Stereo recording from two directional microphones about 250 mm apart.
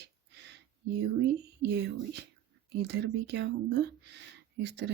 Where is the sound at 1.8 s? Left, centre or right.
Right.